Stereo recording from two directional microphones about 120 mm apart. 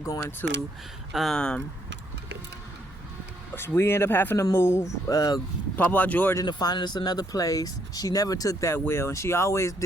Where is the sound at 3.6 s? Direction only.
20° left (ahead or behind).